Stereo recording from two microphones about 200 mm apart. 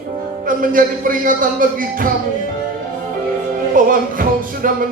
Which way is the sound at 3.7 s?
45° right (ahead or behind).